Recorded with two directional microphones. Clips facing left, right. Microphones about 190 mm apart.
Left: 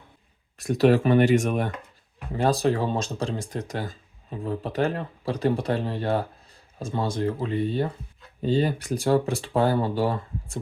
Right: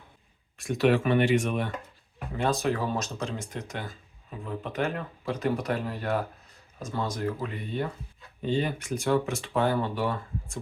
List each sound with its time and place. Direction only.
0.6 s speech: 40° left (ahead or behind)